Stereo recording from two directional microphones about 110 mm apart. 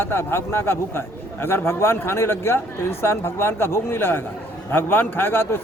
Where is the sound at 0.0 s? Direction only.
20° left (ahead or behind).